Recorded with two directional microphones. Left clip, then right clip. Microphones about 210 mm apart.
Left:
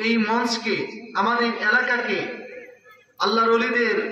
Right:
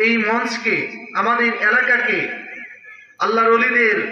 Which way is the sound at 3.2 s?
55° left (ahead or behind).